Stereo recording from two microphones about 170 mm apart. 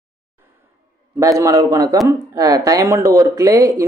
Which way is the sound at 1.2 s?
20° right (ahead or behind).